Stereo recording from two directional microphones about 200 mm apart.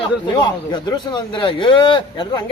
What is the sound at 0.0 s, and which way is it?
Speech, 20° left (ahead or behind).